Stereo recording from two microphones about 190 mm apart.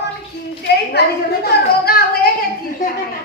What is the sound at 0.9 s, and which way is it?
A woman's voice, 55° left (ahead or behind).